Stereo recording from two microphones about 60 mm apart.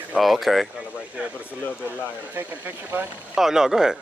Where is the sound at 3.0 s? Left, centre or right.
Right.